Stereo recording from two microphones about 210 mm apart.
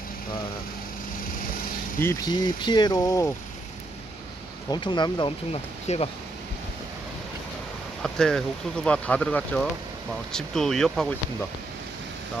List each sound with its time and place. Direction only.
2.0 s speech: 15° left (ahead or behind)
4.7 s speech: 20° left (ahead or behind)
8.0 s speech: centre (ahead or behind)